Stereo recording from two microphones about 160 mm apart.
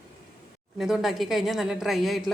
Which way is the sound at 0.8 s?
Centre (ahead or behind).